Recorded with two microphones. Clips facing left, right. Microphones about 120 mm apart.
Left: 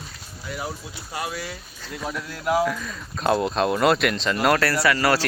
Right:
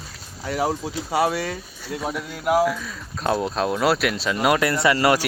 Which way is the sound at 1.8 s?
10° right (ahead or behind).